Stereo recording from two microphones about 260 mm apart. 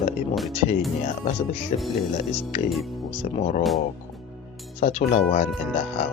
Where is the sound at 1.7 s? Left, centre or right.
Left.